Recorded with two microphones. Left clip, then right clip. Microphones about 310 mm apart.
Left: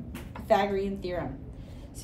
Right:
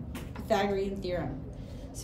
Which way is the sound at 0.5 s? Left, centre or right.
Left.